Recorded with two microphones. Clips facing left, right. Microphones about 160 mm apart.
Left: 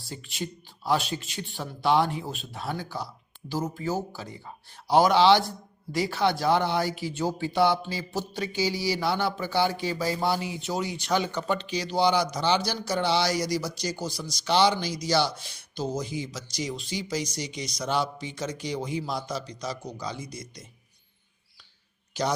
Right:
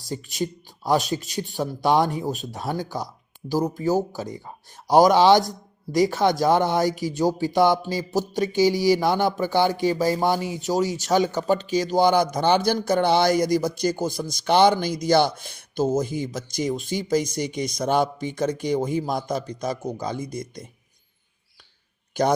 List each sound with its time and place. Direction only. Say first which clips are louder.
0.0 s a man's voice: right 7 dB; 40° right (ahead or behind)
22.2 s speech: right 7 dB; 50° right (ahead or behind)